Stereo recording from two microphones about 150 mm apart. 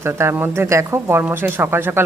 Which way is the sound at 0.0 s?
15° right (ahead or behind).